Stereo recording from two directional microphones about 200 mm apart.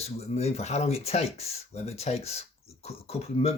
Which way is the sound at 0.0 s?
30° left (ahead or behind).